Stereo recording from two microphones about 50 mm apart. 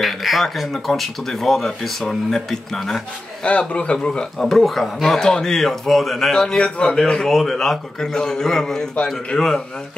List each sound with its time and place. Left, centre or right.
0.0 s a man's voice: centre
3.4 s a man's voice: left
4.4 s a man's voice: centre
7.2 s a man's voice: centre